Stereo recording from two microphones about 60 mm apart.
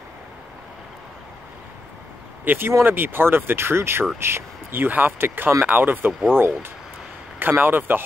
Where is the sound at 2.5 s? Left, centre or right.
Right.